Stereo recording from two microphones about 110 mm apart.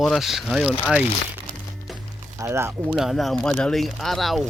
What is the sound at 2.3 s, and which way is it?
Speech, 25° right (ahead or behind).